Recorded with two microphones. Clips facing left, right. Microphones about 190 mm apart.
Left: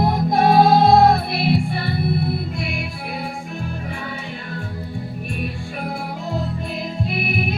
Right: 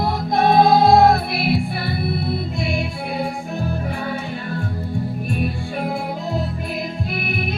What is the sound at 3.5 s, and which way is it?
Music, 35° right (ahead or behind).